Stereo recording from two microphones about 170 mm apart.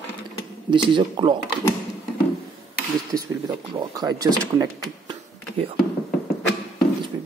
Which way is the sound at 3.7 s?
25° right (ahead or behind).